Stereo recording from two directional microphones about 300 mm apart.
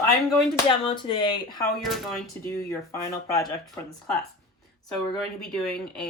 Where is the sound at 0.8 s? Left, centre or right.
Centre.